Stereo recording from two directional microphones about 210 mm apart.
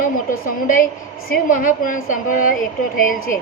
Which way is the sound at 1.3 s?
40° left (ahead or behind).